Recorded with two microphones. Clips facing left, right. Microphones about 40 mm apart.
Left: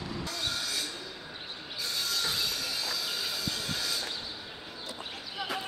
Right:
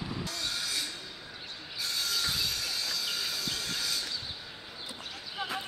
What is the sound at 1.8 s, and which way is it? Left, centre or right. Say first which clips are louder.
Train: even; centre.